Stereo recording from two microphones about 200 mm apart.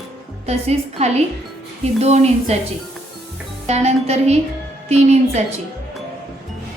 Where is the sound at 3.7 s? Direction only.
35° right (ahead or behind).